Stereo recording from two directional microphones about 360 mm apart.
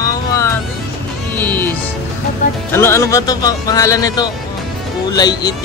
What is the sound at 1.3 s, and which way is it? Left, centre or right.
Music, centre.